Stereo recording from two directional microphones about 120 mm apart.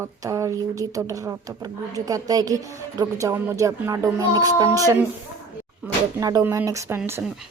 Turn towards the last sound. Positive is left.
turn(degrees=-20)  # may be behind; listen again after turning